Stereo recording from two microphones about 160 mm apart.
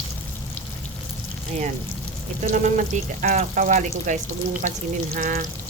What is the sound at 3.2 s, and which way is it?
Speech, 50° right (ahead or behind).